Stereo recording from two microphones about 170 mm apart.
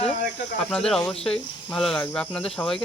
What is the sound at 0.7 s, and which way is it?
Speech, 5° left (ahead or behind).